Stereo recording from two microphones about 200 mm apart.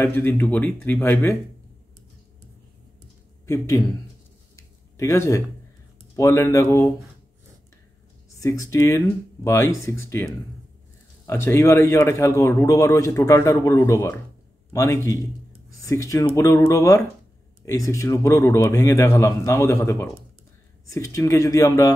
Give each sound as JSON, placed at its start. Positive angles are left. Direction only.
{"t": 0.0, "sound": "speech", "side_deg": 10}
{"t": 3.4, "sound": "speech", "side_deg": 15}
{"t": 4.6, "sound": "a sound", "side_deg": 15}
{"t": 6.1, "sound": "speech", "side_deg": 15}
{"t": 8.4, "sound": "speech", "side_deg": 15}